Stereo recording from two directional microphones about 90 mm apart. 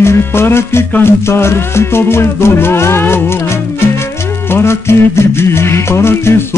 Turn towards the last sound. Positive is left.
turn(degrees=30)  # may be behind; listen again after turning